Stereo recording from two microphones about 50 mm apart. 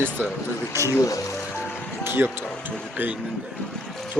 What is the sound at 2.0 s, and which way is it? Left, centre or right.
Music, right.